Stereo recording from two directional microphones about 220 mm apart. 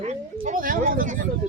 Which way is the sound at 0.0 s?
30° right (ahead or behind).